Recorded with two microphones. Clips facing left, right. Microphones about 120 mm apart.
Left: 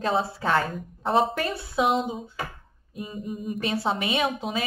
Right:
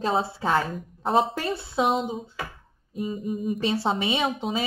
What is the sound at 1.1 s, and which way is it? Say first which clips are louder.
Speech: even; 25° right (ahead or behind).